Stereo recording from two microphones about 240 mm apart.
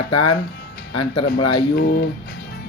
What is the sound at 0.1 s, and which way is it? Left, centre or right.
Speech, left.